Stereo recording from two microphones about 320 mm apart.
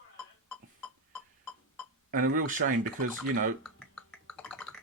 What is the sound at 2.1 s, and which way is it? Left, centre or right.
Speech, right.